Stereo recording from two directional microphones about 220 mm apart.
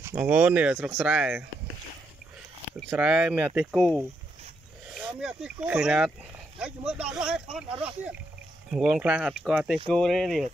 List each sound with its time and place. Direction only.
0.0 s speech: 10° right (ahead or behind)
2.9 s speech: 5° right (ahead or behind)